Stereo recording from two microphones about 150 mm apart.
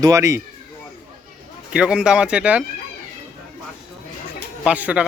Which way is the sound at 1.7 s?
5° right (ahead or behind).